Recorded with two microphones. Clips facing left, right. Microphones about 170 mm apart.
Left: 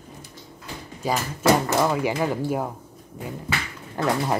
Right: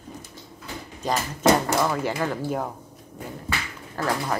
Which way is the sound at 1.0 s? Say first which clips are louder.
Even; 10° left (ahead or behind).